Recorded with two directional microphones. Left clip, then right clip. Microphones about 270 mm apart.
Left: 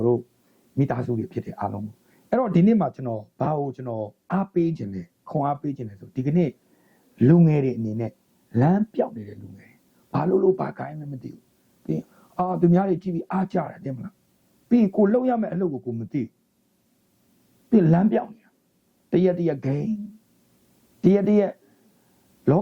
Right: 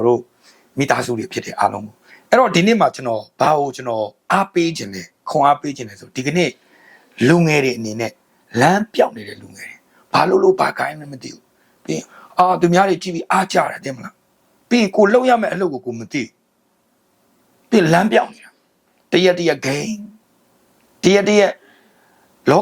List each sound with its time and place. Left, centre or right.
0.8 s speech: centre
17.7 s speech: centre
21.0 s speech: centre